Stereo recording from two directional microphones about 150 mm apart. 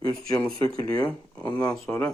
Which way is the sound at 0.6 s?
25° left (ahead or behind).